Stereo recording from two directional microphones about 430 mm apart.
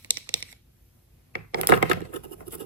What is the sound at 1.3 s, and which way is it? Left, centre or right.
Coin, right.